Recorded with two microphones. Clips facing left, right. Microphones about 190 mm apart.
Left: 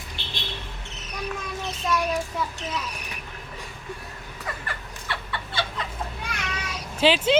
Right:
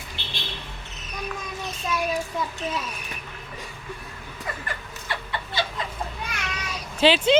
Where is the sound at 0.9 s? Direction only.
75° left (ahead or behind).